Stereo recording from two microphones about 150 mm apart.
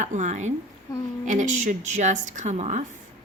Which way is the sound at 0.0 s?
55° right (ahead or behind).